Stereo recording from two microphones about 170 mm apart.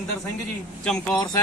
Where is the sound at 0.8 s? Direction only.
5° left (ahead or behind).